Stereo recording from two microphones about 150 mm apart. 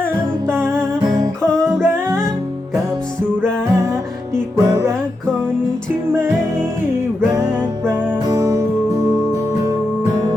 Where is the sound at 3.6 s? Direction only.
20° right (ahead or behind).